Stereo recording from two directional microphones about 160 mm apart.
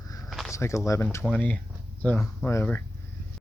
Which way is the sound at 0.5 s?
20° left (ahead or behind).